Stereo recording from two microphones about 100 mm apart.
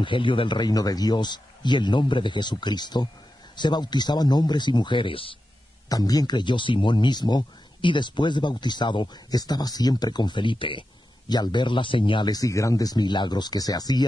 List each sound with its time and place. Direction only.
0.0 s speech: 55° left (ahead or behind)
5.9 s speech: 40° left (ahead or behind)